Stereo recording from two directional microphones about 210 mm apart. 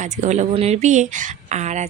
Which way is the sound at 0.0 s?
35° right (ahead or behind).